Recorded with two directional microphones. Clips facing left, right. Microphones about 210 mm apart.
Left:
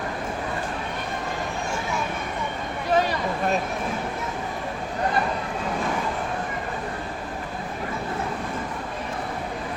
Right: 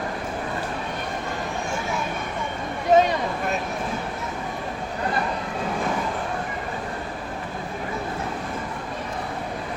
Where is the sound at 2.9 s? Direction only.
25° right (ahead or behind).